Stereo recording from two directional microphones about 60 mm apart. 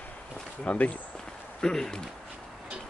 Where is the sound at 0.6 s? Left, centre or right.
Left.